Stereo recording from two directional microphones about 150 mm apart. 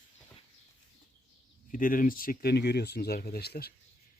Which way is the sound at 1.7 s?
65° left (ahead or behind).